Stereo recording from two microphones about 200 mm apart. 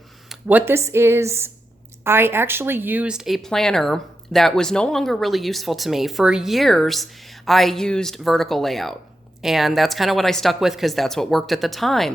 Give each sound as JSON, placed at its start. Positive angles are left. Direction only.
{"t": 0.3, "sound": "speech", "side_deg": -10}